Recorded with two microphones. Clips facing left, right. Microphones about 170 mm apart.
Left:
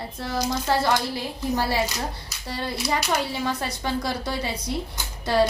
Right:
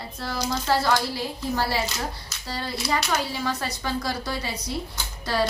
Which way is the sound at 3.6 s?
25° left (ahead or behind).